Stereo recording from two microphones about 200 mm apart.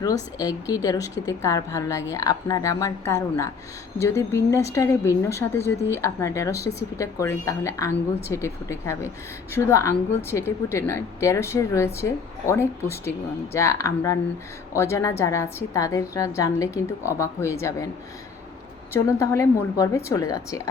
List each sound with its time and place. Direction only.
0.0 s speech: 20° left (ahead or behind)
19.2 s speech: 15° left (ahead or behind)